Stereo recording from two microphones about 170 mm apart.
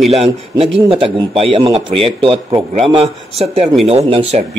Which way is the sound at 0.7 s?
35° right (ahead or behind).